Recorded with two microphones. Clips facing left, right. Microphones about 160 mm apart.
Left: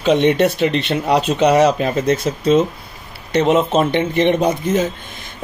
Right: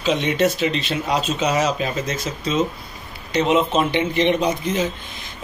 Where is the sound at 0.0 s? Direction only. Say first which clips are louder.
Left 5 dB; 60° left (ahead or behind).